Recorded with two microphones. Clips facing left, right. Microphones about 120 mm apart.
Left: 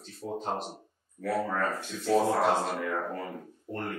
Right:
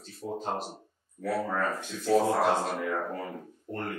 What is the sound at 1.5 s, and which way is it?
Speech, 20° right (ahead or behind).